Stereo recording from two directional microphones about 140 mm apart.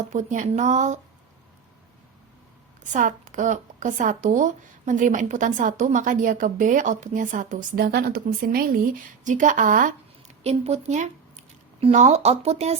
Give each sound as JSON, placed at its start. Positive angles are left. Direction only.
{"t": 0.1, "sound": "speech", "side_deg": -60}
{"t": 2.9, "sound": "speech", "side_deg": -65}
{"t": 9.2, "sound": "speech", "side_deg": -65}
{"t": 10.4, "sound": "speech", "side_deg": -55}